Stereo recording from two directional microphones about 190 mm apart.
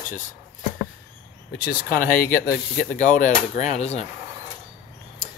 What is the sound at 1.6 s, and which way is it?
Speech, 50° left (ahead or behind).